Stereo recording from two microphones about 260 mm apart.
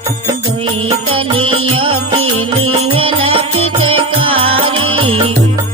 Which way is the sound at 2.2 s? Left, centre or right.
Right.